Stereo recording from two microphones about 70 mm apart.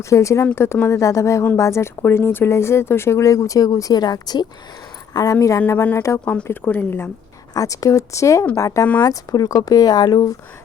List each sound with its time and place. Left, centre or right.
0.0 s speech: left
5.1 s speech: left
7.5 s speech: left
9.0 s speech: left